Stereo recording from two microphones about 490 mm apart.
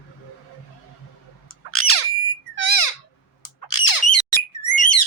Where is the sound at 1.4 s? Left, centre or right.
Left.